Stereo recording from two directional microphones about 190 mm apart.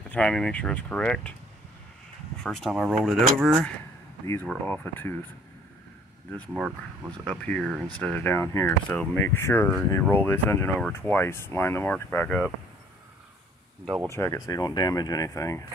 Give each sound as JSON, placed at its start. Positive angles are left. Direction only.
{"t": 0.1, "sound": "speech", "side_deg": 5}
{"t": 2.4, "sound": "speech", "side_deg": 0}
{"t": 7.2, "sound": "speech", "side_deg": 5}
{"t": 14.1, "sound": "speech", "side_deg": 15}